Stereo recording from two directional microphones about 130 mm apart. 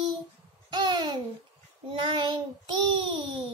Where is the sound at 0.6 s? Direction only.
35° right (ahead or behind).